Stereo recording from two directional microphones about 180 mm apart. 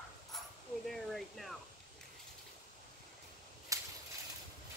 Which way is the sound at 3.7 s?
15° right (ahead or behind).